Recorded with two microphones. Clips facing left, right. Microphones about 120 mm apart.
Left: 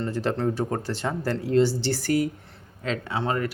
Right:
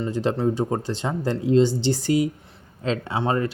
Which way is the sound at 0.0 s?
15° right (ahead or behind).